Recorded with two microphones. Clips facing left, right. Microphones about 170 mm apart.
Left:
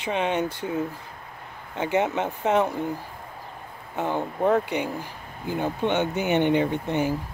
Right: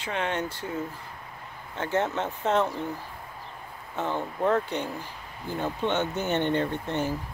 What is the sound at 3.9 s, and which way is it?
Speech, 15° left (ahead or behind).